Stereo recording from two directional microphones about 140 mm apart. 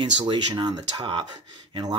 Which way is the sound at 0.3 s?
35° right (ahead or behind).